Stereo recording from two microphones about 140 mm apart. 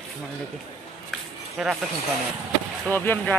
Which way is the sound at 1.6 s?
Centre (ahead or behind).